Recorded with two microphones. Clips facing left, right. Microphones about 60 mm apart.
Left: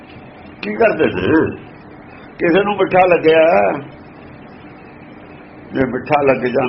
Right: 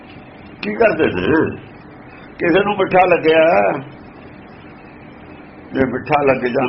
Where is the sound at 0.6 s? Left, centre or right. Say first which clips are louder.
Even; centre.